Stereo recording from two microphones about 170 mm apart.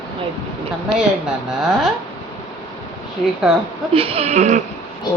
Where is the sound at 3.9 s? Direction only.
35° right (ahead or behind).